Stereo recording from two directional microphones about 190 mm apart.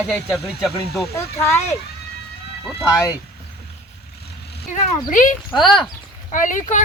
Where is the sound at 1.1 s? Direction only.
15° left (ahead or behind).